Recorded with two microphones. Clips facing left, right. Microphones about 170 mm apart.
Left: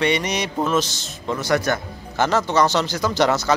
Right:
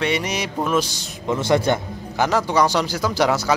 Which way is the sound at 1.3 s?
25° right (ahead or behind).